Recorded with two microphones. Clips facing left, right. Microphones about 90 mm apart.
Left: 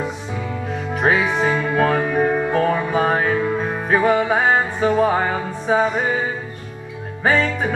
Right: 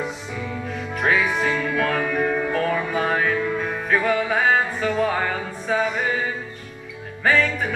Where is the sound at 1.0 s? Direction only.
30° left (ahead or behind).